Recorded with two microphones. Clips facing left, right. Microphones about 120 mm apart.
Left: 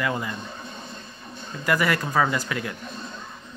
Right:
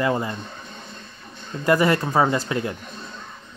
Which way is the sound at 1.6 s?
25° right (ahead or behind).